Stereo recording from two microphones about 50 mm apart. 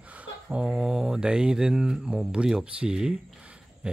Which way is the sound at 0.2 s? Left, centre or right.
Centre.